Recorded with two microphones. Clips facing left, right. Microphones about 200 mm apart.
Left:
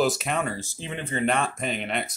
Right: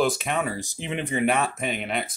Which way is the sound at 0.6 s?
15° right (ahead or behind).